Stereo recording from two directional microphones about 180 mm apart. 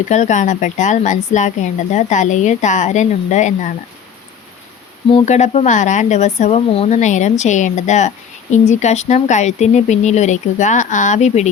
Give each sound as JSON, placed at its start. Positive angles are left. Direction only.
{"t": 0.1, "sound": "speech", "side_deg": 40}
{"t": 5.1, "sound": "speech", "side_deg": 40}